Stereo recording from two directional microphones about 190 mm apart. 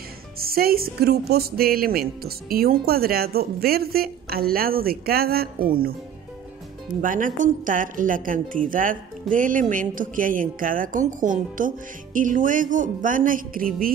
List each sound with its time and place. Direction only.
0.4 s a woman's voice: 55° right (ahead or behind)
7.0 s a woman's voice: 45° right (ahead or behind)